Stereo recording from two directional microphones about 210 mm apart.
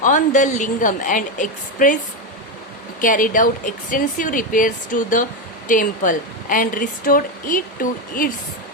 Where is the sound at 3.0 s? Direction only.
40° left (ahead or behind).